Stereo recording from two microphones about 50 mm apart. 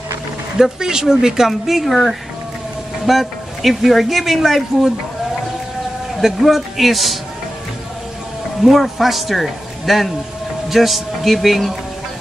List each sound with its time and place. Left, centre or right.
0.6 s speech: centre
3.1 s speech: centre
6.2 s speech: centre
8.6 s speech: centre